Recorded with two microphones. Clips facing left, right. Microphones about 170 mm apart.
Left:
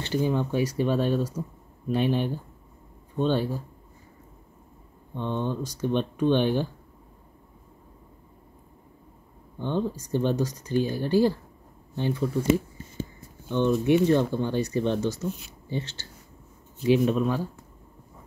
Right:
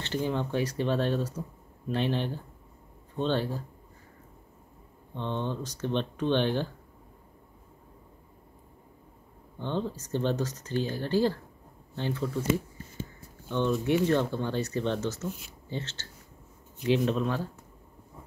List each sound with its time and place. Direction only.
0.0 s speech: 10° left (ahead or behind)
5.1 s speech: 10° left (ahead or behind)
9.6 s speech: 10° left (ahead or behind)